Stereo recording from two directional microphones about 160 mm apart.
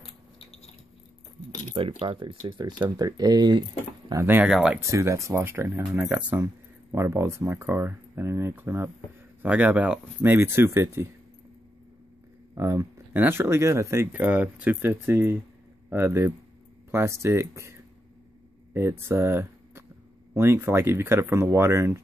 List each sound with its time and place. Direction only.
0.0 s a sound: 35° left (ahead or behind)
1.8 s speech: 35° right (ahead or behind)
4.1 s speech: 15° right (ahead or behind)
4.5 s speech: 5° right (ahead or behind)
4.7 s speech: 20° right (ahead or behind)
6.4 s speech: 20° right (ahead or behind)
12.5 s speech: 15° right (ahead or behind)